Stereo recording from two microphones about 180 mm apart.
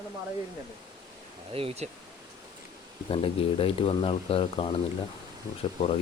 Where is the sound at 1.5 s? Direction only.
35° right (ahead or behind).